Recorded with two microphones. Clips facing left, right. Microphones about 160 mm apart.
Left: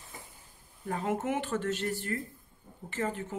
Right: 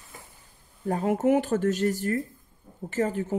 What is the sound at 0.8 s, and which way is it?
Speech, 40° right (ahead or behind).